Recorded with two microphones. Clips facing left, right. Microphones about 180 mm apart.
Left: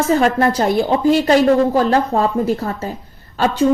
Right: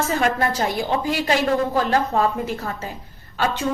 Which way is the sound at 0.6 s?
50° left (ahead or behind).